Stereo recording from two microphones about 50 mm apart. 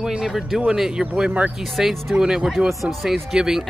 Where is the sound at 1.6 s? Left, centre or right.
Centre.